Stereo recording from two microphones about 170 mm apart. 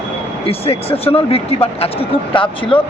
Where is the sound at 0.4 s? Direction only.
35° left (ahead or behind).